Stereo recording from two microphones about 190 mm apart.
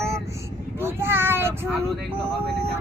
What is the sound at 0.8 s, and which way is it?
Child singing, 10° right (ahead or behind).